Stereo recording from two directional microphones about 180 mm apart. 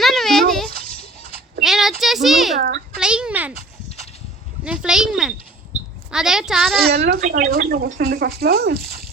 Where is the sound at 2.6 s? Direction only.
60° right (ahead or behind).